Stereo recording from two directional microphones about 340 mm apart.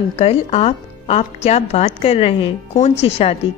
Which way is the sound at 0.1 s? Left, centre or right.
Centre.